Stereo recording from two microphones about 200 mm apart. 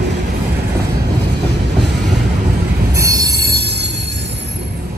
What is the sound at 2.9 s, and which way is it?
Train wheels squealing, 15° right (ahead or behind).